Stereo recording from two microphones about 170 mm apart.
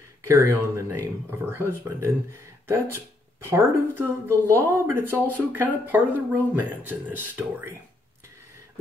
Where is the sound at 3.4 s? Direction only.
15° right (ahead or behind).